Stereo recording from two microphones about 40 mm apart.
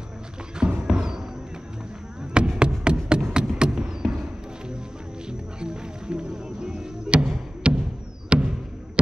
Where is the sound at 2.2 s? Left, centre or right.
Right.